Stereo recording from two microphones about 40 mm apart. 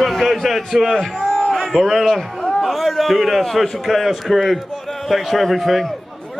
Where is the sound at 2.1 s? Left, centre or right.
Centre.